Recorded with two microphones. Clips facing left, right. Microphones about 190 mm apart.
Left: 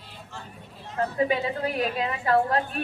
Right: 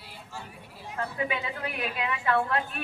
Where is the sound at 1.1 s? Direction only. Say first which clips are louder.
Left 8 dB; 35° left (ahead or behind).